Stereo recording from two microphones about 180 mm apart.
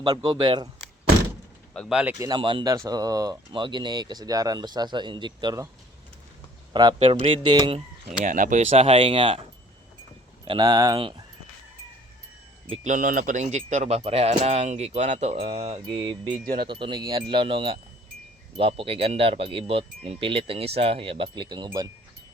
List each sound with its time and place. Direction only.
0.0 s speech: 25° right (ahead or behind)
1.7 s speech: 5° left (ahead or behind)
2.1 s speech: 20° right (ahead or behind)
6.7 s speech: 25° right (ahead or behind)
8.2 s speech: 45° right (ahead or behind); by 9.4 s 30° right (ahead or behind)
10.4 s speech: 25° right (ahead or behind)
12.7 s speech: 45° right (ahead or behind); by 21.8 s 25° right (ahead or behind)